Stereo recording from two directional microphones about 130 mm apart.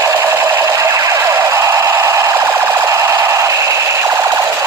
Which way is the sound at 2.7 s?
20° right (ahead or behind).